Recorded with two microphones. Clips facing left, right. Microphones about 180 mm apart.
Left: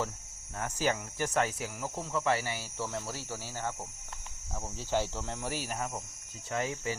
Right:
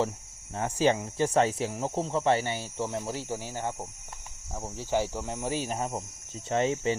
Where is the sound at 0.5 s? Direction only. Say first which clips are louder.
Right 6 dB; 25° right (ahead or behind).